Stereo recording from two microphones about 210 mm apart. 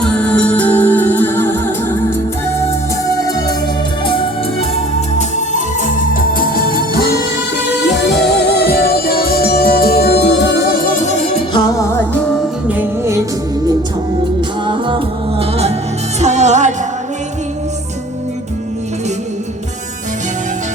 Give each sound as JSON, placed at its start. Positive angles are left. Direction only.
{"t": 0.0, "sound": "music", "side_deg": 5}
{"t": 4.0, "sound": "music", "side_deg": 25}
{"t": 4.9, "sound": "music", "side_deg": 35}
{"t": 12.6, "sound": "music", "side_deg": -10}
{"t": 14.7, "sound": "music", "side_deg": -25}